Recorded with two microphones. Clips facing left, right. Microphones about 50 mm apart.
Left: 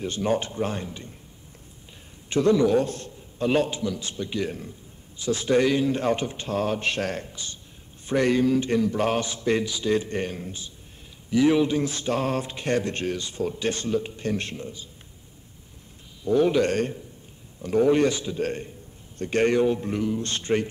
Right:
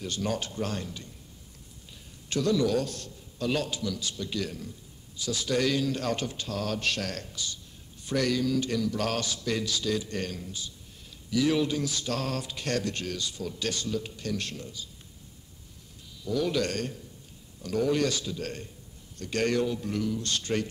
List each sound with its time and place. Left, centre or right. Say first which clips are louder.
0.0 s mantra: left 6 dB; left
2.2 s mantra: left 6 dB; left
9.9 s a man's voice: left 6 dB; left
11.2 s mantra: left 6 dB; left
16.3 s a man's voice: left 8 dB; left
17.6 s mantra: left 7 dB; left
19.1 s a man's voice: left 6 dB; left